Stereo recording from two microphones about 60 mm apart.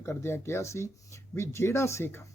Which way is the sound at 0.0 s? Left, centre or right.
Left.